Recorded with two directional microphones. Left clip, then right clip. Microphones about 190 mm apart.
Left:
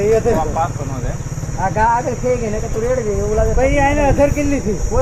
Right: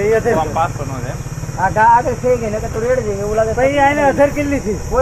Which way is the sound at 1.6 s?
5° left (ahead or behind).